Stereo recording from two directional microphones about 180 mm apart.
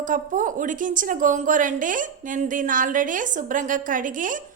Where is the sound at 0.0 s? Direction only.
45° right (ahead or behind).